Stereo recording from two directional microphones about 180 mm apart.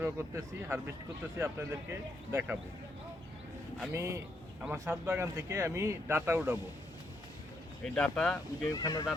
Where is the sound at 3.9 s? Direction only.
15° right (ahead or behind).